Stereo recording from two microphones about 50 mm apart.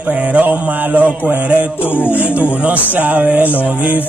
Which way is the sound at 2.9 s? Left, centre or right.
Right.